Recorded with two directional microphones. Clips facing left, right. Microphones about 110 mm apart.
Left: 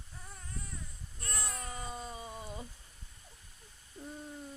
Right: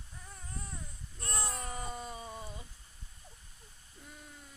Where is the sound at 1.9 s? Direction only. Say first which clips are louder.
Right 1 dB; 10° left (ahead or behind).